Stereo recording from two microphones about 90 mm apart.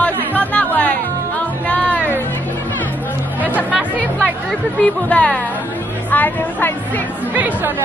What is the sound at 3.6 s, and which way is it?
Music, 15° right (ahead or behind).